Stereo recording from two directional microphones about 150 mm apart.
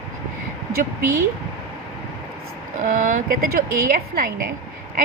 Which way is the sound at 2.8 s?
60° right (ahead or behind).